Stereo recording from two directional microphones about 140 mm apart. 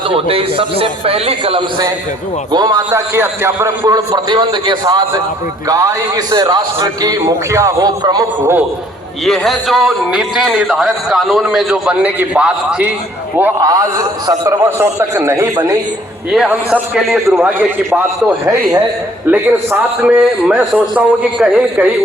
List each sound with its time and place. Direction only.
0.1 s a man's voice: 40° right (ahead or behind)
2.5 s a man's voice: 30° right (ahead or behind)
3.2 s a man's voice: 20° right (ahead or behind)
9.2 s a man's voice: centre (ahead or behind)
13.6 s a man's voice: 25° right (ahead or behind)
16.3 s a man's voice: 5° right (ahead or behind)
17.4 s a man's voice: 10° right (ahead or behind)